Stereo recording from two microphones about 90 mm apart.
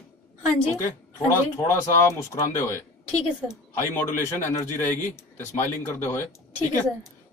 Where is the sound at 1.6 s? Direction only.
30° left (ahead or behind).